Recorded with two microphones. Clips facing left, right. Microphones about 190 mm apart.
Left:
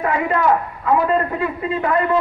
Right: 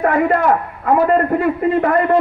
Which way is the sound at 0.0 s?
50° right (ahead or behind).